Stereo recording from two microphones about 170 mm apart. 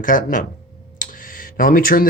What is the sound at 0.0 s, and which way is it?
Speech, 50° left (ahead or behind).